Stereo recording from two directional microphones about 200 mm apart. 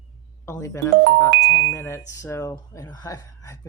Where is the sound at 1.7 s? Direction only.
10° left (ahead or behind).